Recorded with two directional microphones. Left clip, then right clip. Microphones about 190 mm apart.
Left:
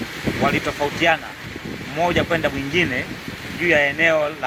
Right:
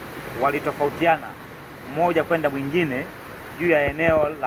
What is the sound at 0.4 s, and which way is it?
Speech, 20° left (ahead or behind).